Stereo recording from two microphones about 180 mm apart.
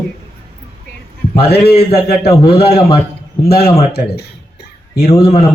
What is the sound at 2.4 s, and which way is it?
Speech, 60° left (ahead or behind).